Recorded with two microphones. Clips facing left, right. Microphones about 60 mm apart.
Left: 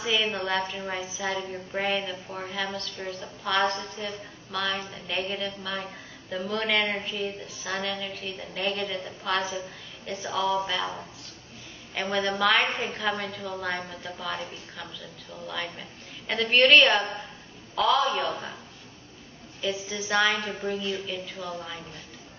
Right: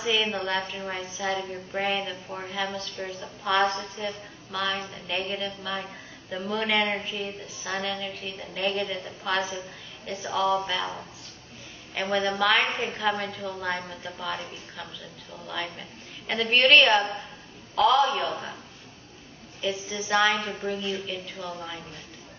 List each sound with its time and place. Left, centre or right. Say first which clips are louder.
0.0 s a woman's voice: right 1 dB; centre
2.0 s a woman's voice: even; centre
2.4 s a woman's voice: right 1 dB; centre
19.6 s a woman's voice: even; centre